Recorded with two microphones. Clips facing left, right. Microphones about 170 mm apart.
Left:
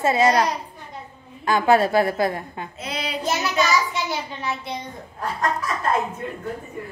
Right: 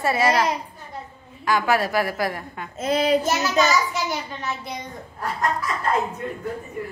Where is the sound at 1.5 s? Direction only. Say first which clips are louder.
Left 4 dB; 25° left (ahead or behind).